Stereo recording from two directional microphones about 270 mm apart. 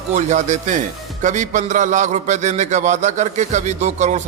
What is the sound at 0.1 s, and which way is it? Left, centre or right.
A man's voice, right.